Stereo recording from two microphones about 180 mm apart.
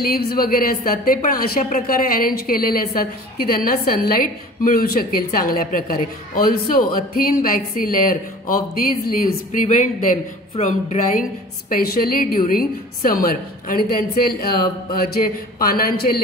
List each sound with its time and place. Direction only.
0.0 s a woman's voice: 60° left (ahead or behind)
11.7 s a woman's voice: 55° left (ahead or behind)